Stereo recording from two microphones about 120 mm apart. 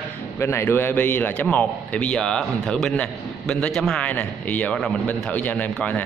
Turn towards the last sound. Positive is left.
turn(degrees=15)  # may be behind; listen again after turning